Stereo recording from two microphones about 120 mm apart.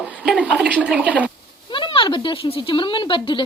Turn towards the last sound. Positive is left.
turn(degrees=45)  # may be behind; listen again after turning